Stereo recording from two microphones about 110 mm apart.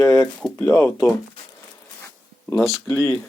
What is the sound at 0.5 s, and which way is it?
Speech, 25° left (ahead or behind).